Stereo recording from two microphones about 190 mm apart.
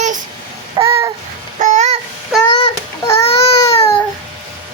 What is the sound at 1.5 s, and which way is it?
Babbling, 40° right (ahead or behind).